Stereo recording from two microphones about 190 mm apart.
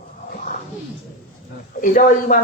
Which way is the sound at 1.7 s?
45° left (ahead or behind).